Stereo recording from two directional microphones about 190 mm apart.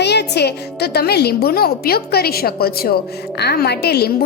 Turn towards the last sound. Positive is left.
turn(degrees=55)  # may be behind; listen again after turning